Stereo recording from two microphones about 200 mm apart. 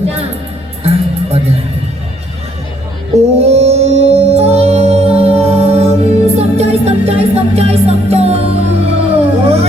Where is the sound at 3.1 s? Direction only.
30° right (ahead or behind).